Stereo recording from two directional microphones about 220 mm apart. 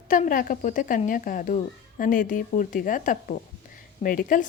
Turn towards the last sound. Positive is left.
turn(degrees=35)  # may be behind; listen again after turning